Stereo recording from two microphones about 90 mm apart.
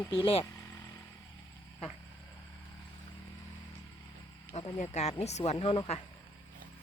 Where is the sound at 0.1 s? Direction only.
85° left.